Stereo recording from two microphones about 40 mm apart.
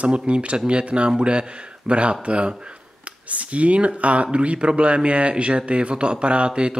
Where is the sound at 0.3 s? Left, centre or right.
Right.